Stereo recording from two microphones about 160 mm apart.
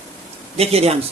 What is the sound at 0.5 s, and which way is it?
Speech, 40° right (ahead or behind).